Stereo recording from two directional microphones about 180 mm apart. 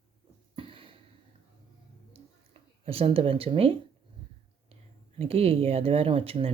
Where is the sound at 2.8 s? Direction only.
30° right (ahead or behind).